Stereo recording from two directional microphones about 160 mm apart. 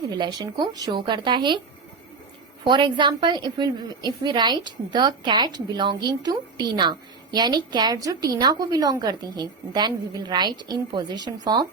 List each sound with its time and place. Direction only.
0.1 s a woman's voice: 25° right (ahead or behind)
2.6 s a woman's voice: 30° right (ahead or behind)